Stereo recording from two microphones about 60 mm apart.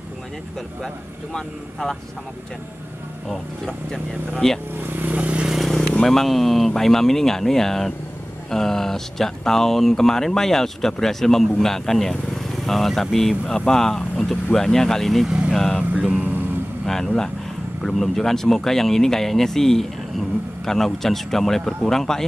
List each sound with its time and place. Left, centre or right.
0.8 s speech: centre
3.3 s speech: centre
4.8 s vehicle: right
5.5 s vehicle: centre
5.9 s speech: centre
15.2 s speech: centre
15.5 s speech: centre
16.8 s speech: centre